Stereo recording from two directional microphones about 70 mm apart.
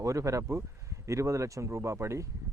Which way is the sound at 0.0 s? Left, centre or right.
Right.